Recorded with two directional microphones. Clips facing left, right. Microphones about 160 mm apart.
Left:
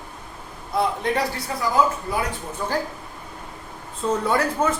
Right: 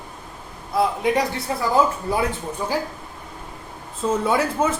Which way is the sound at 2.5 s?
10° right (ahead or behind).